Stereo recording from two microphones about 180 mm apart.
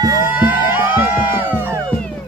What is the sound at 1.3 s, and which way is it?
Music, 10° right (ahead or behind).